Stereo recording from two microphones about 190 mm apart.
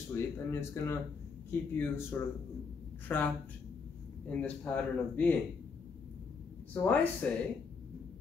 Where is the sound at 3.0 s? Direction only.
10° left (ahead or behind).